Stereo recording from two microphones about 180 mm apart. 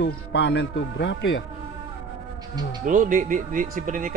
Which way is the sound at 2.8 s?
45° right (ahead or behind).